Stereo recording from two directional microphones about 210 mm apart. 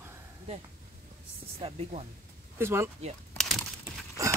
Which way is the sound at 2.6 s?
10° right (ahead or behind).